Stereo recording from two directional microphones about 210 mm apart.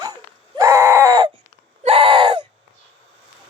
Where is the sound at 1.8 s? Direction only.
25° right (ahead or behind).